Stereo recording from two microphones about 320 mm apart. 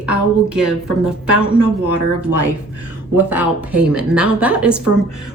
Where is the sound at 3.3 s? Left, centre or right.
Centre.